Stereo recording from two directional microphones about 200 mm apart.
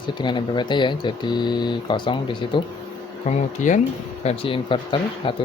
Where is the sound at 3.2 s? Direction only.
40° left (ahead or behind).